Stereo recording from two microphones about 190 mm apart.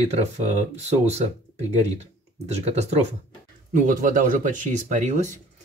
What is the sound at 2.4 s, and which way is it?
Speech, 35° right (ahead or behind).